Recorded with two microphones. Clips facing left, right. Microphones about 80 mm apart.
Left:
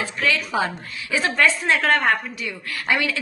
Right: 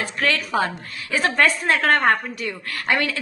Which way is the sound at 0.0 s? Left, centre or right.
Right.